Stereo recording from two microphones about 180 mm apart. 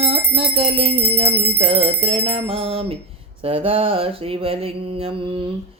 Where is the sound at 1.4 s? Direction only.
35° right (ahead or behind).